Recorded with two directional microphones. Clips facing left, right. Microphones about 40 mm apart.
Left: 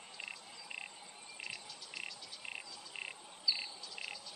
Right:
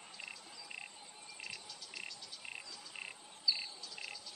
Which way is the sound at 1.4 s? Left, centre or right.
Centre.